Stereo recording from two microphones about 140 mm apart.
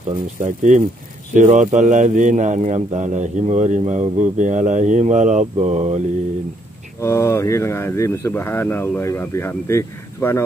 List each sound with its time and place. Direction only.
0.4 s speech: 65° right (ahead or behind)
7.0 s speech: 20° left (ahead or behind)